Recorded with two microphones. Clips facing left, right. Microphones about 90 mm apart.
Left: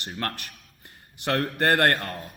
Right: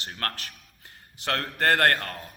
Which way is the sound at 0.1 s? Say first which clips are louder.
Left 2 dB; 10° left (ahead or behind).